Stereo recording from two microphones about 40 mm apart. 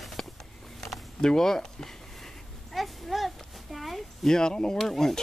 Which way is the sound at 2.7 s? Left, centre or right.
Centre.